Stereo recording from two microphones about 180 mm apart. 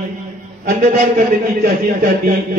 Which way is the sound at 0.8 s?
50° right (ahead or behind).